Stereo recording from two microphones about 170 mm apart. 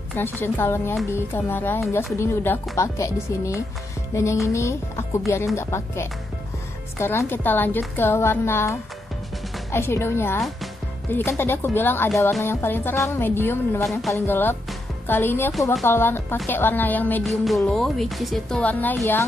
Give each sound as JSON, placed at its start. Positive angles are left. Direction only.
{"t": 0.1, "sound": "speech", "side_deg": 10}
{"t": 4.1, "sound": "music", "side_deg": 15}
{"t": 4.5, "sound": "speech", "side_deg": 15}